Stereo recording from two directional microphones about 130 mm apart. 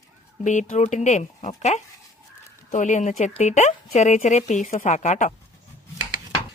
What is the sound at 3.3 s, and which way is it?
Speech, 60° left (ahead or behind).